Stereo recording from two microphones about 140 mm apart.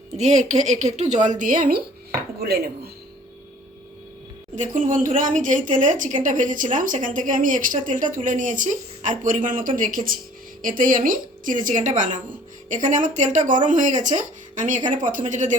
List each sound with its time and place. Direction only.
0.2 s speech: 55° right (ahead or behind)
1.4 s speech: 75° right (ahead or behind)
4.5 s speech: 65° right (ahead or behind)